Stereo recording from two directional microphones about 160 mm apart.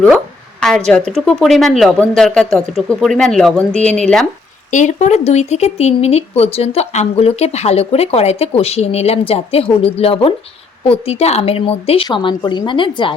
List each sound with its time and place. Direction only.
0.9 s speech: 5° left (ahead or behind)
4.7 s a woman's voice: 50° left (ahead or behind); by 13.1 s 30° left (ahead or behind)